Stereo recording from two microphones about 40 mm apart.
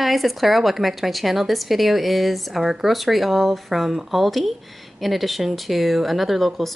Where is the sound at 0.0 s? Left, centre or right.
Centre.